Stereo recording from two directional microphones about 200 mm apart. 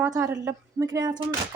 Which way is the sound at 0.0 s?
15° right (ahead or behind).